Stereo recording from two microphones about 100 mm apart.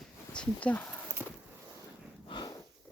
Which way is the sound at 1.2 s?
20° right (ahead or behind).